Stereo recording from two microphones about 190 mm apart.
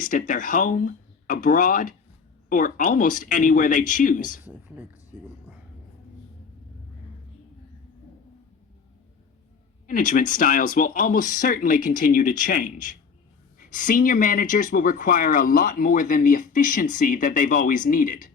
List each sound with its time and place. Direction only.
0.0 s speech: 45° left (ahead or behind)
4.4 s speech: 10° right (ahead or behind)
9.8 s speech: 45° left (ahead or behind)